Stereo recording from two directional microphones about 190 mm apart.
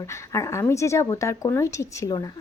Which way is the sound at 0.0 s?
15° left (ahead or behind).